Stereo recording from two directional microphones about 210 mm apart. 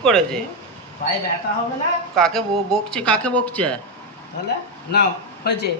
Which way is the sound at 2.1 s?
5° left (ahead or behind).